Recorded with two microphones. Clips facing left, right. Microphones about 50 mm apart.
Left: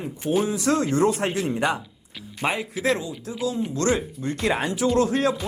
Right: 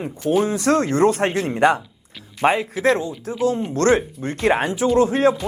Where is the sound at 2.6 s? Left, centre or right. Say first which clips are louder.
Right 5 dB; right.